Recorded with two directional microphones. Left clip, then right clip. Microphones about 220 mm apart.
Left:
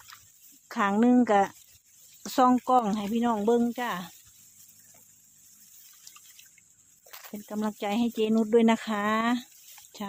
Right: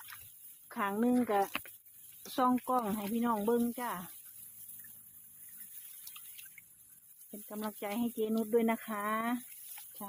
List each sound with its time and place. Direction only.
0.7 s speech: 40° left (ahead or behind)
7.4 s speech: 35° left (ahead or behind)